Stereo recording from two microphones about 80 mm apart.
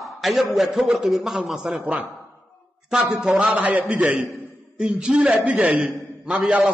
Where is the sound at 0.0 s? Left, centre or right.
Centre.